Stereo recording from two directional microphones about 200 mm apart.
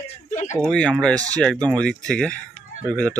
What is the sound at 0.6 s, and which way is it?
Speech, 5° left (ahead or behind).